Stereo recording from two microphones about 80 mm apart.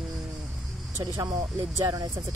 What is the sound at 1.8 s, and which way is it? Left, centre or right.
Speech, right.